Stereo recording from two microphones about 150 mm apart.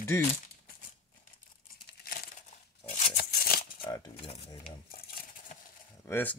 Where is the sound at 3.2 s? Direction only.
85° left.